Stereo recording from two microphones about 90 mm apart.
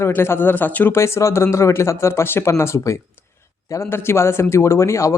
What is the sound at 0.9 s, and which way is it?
Speech, 30° left (ahead or behind).